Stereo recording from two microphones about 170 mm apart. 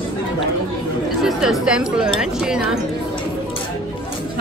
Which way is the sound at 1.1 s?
Centre (ahead or behind).